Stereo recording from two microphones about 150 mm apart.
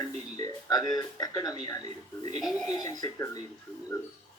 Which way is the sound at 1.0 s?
25° left (ahead or behind).